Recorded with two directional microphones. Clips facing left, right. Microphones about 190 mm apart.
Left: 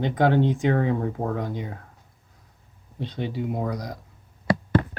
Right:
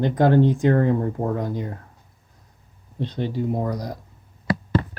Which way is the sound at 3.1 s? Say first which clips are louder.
Right 3 dB; 5° left (ahead or behind).